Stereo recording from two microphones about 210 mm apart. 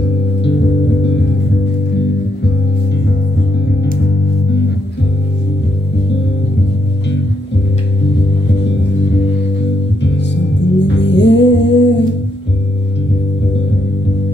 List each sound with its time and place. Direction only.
10.0 s music: 55° left (ahead or behind)